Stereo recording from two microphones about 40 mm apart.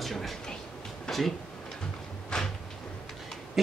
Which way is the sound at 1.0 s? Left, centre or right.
Centre.